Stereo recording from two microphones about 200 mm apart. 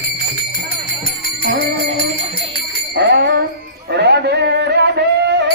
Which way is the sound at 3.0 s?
55° right (ahead or behind).